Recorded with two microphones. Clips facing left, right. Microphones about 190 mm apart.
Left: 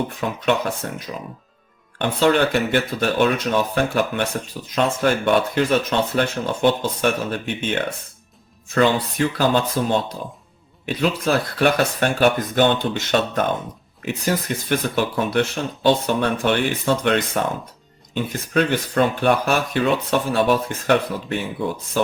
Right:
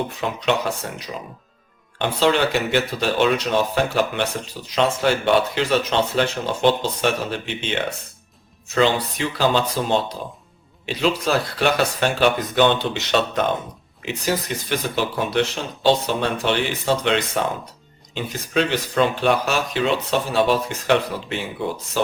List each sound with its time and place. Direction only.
0.2 s speech: 50° left (ahead or behind)